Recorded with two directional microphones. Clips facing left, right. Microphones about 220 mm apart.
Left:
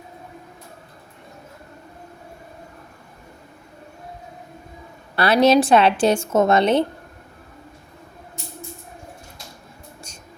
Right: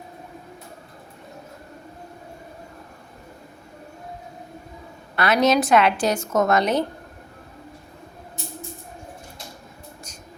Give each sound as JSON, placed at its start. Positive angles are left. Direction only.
{"t": 5.1, "sound": "a woman's voice", "side_deg": 30}